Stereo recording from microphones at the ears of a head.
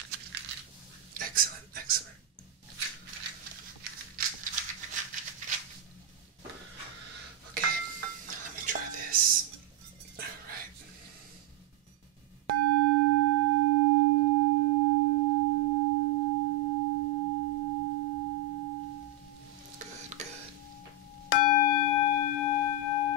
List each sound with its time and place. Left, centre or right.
0.0 s coin: right
1.1 s a sound: right
3.1 s a sound: right
7.5 s dishes: right
12.4 s singing bowl: right
21.3 s singing bowl: left